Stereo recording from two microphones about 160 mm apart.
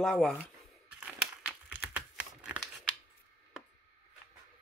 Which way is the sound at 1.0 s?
5° right (ahead or behind).